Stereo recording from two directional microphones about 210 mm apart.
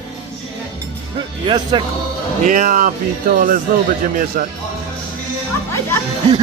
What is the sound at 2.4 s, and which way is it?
Speech, 35° right (ahead or behind).